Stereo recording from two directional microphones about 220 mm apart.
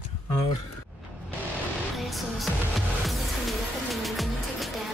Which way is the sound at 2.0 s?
Centre (ahead or behind).